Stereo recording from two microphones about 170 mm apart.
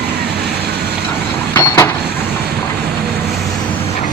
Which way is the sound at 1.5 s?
10° left (ahead or behind).